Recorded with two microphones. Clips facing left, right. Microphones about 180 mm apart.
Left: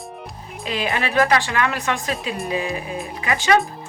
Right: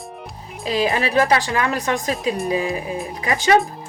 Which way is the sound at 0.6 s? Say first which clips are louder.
Right 4 dB; 35° right (ahead or behind).